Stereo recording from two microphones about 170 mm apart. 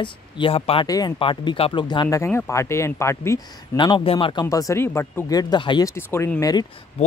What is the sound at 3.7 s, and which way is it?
Speech, 30° left (ahead or behind).